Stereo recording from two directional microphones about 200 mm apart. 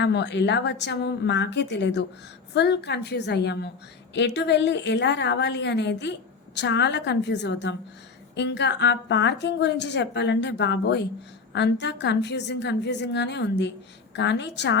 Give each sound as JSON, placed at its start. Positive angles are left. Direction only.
{"t": 0.0, "sound": "a woman's voice", "side_deg": 60}